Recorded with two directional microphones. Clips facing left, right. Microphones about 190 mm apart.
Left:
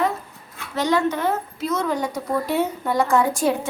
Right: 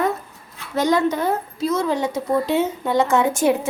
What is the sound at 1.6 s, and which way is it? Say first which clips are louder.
Speech: right 3 dB; 30° right (ahead or behind).